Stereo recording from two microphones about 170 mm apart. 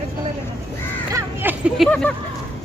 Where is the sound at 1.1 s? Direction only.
10° right (ahead or behind).